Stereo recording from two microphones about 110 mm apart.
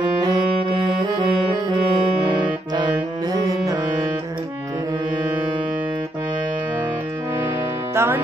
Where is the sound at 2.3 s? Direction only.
45° right (ahead or behind).